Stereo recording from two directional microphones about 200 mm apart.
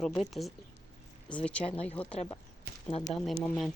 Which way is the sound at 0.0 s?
Centre (ahead or behind).